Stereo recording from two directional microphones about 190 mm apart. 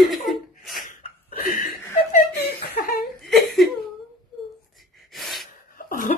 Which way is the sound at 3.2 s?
Centre (ahead or behind).